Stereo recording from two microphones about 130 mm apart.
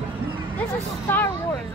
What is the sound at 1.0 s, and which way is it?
Speech, 15° left (ahead or behind).